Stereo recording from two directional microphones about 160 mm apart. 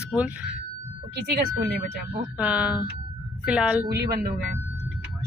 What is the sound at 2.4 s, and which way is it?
A woman's voice, 10° right (ahead or behind).